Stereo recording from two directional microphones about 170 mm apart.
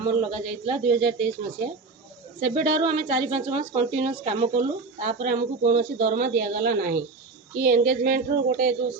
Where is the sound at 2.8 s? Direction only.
30° right (ahead or behind).